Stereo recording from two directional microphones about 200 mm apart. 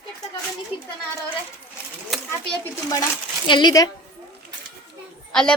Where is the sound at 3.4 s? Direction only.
20° left (ahead or behind).